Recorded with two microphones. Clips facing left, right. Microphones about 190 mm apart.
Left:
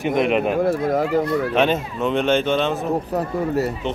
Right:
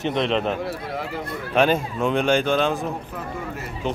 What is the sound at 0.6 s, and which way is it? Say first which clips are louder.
Speech: left 10 dB; 45° left (ahead or behind).